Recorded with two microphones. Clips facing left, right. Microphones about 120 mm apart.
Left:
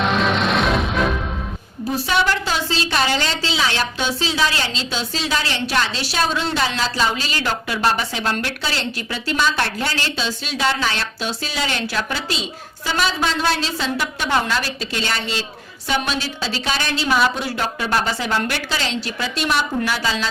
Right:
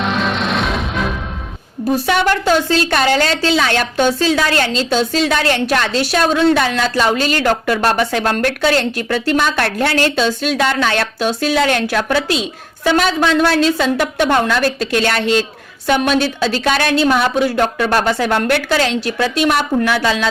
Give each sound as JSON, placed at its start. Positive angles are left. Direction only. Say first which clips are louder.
{"t": 0.0, "sound": "music", "louder": "even", "side_deg": 0}
{"t": 2.0, "sound": "a woman's voice", "louder": "right 5 dB", "side_deg": -55}